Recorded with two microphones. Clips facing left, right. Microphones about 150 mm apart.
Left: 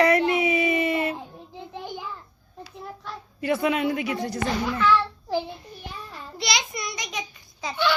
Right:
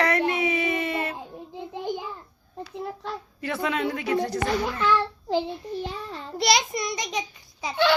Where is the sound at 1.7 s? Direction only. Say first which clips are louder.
Right 5 dB; 15° right (ahead or behind).